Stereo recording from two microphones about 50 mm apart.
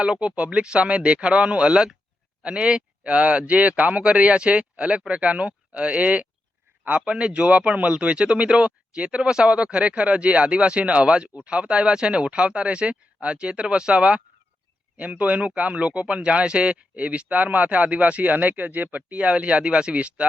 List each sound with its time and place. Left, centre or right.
0.0 s speech: right